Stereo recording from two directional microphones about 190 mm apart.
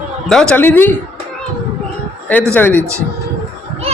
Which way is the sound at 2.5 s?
10° left (ahead or behind).